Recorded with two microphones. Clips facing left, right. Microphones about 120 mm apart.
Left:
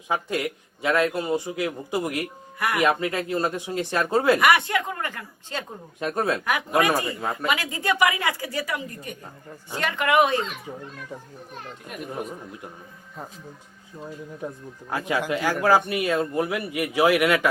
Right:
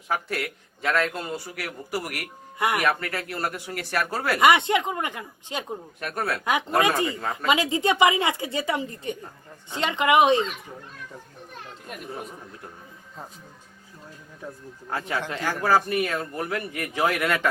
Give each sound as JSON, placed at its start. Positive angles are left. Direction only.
{"t": 0.1, "sound": "a man's voice", "side_deg": 15}
{"t": 2.6, "sound": "a woman's voice", "side_deg": -20}
{"t": 2.8, "sound": "speech", "side_deg": 20}
{"t": 4.4, "sound": "a woman's voice", "side_deg": -20}
{"t": 6.0, "sound": "speech", "side_deg": 20}
{"t": 6.7, "sound": "a woman's voice", "side_deg": -20}
{"t": 14.4, "sound": "a man's voice", "side_deg": 20}